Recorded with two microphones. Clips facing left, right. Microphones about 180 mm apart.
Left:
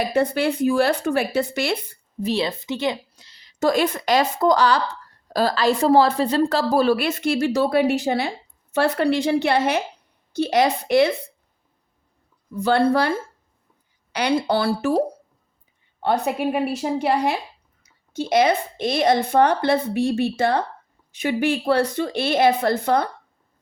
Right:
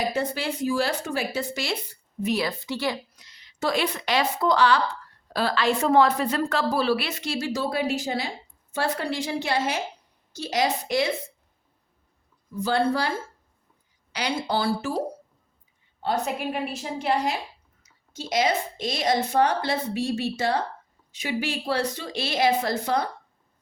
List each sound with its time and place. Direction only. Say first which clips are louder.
0.1 s speech: left 7 dB; 60° left (ahead or behind)
2.2 s a woman's voice: left 3 dB; 25° left (ahead or behind); by 11.1 s 60° left (ahead or behind)
12.5 s speech: left 5 dB; 60° left (ahead or behind)